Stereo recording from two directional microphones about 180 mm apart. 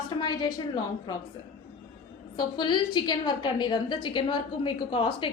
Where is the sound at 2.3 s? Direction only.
25° left (ahead or behind).